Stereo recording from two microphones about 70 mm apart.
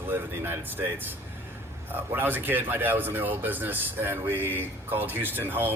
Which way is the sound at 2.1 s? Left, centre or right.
Right.